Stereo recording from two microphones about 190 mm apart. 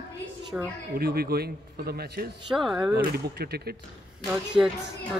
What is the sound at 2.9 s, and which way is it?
Speech, 55° right (ahead or behind).